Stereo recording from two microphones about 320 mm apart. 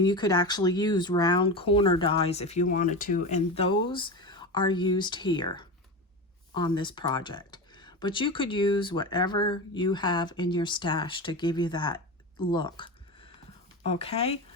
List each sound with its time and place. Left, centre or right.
0.0 s speech: centre